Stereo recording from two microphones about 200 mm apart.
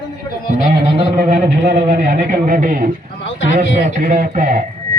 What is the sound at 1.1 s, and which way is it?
Speech, 40° right (ahead or behind).